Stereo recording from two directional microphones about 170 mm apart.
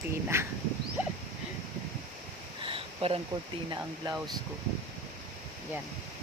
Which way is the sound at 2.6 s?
30° right (ahead or behind).